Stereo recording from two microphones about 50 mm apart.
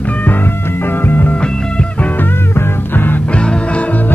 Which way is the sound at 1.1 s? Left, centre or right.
Left.